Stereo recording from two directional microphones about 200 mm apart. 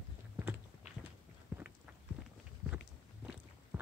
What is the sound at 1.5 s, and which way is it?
Clip-clop, 10° right (ahead or behind).